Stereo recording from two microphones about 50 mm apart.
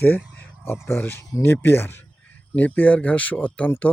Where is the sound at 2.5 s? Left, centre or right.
Left.